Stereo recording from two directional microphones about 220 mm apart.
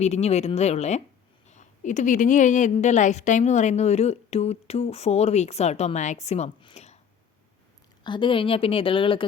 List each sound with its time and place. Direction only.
0.0 s a woman's voice: 30° left (ahead or behind)
8.0 s a woman's voice: 20° left (ahead or behind)